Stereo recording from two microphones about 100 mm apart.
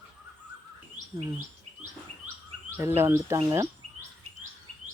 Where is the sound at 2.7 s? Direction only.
25° right (ahead or behind).